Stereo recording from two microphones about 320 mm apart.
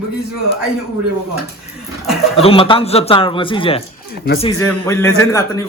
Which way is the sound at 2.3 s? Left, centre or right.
Centre.